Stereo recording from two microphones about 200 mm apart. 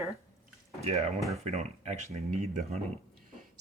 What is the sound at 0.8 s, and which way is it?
Speech, 30° right (ahead or behind).